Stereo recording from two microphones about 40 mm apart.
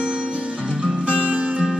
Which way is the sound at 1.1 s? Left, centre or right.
Right.